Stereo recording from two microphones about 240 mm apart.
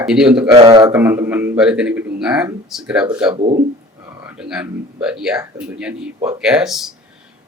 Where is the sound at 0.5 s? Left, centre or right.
Centre.